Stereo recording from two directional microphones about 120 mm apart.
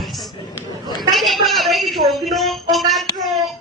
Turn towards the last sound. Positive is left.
turn(degrees=0)  # may be behind; listen again after turning